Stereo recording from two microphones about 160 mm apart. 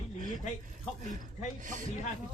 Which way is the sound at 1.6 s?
55° right (ahead or behind).